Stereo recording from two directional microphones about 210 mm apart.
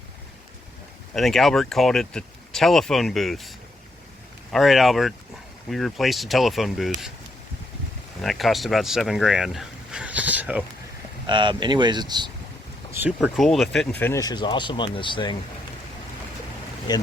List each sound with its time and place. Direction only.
1.1 s speech: centre (ahead or behind)
4.5 s speech: centre (ahead or behind)
8.2 s speech: centre (ahead or behind)
11.3 s speech: 20° right (ahead or behind)
12.9 s speech: 10° right (ahead or behind)
13.1 s speech: centre (ahead or behind); by 15.4 s 25° left (ahead or behind)
16.9 s speech: 20° left (ahead or behind)